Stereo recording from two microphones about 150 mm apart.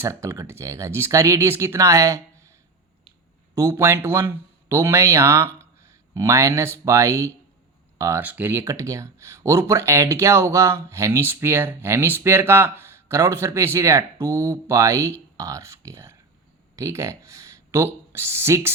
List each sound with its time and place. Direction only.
0.0 s speech: 20° right (ahead or behind)
3.5 s speech: 20° right (ahead or behind)